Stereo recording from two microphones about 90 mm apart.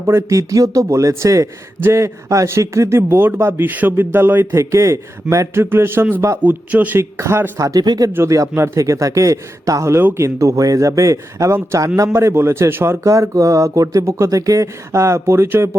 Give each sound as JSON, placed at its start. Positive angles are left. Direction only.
{"t": 0.0, "sound": "a man's voice", "side_deg": -35}
{"t": 7.0, "sound": "a man's voice", "side_deg": -30}
{"t": 7.6, "sound": "speech", "side_deg": -45}
{"t": 8.1, "sound": "speech", "side_deg": -35}